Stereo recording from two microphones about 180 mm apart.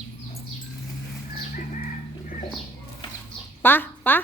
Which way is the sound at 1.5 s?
45° left (ahead or behind).